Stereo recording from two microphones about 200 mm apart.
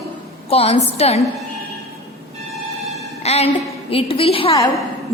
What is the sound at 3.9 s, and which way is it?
Speech, 25° left (ahead or behind).